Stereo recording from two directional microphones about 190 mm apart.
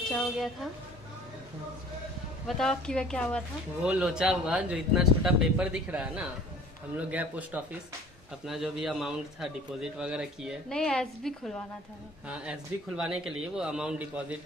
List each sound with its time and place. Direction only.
0.1 s speech: centre (ahead or behind)
2.4 s a man's voice: centre (ahead or behind)